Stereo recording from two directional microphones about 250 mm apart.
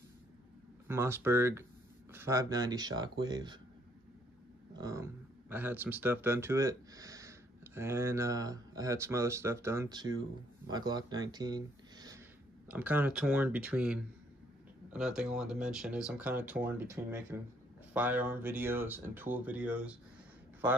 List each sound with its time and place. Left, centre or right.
0.8 s speech: centre
4.7 s speech: centre